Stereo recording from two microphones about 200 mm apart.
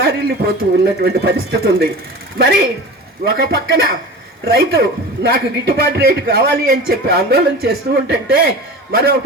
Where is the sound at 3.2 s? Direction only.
55° right (ahead or behind).